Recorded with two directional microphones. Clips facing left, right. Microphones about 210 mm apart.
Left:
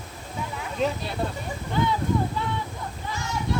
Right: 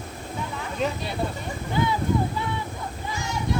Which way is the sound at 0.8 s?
Centre (ahead or behind).